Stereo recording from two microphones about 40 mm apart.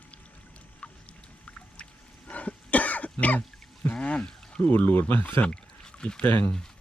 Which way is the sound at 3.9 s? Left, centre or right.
Left.